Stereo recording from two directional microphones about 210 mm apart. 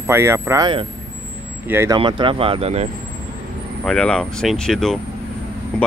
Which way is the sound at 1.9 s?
25° right (ahead or behind).